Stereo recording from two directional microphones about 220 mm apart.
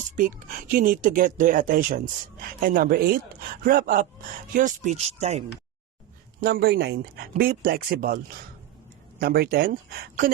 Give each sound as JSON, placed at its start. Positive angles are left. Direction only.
{"t": 0.2, "sound": "speech", "side_deg": -40}
{"t": 6.4, "sound": "speech", "side_deg": -45}